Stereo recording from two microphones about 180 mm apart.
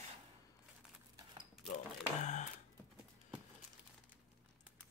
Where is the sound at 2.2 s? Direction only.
40° left (ahead or behind).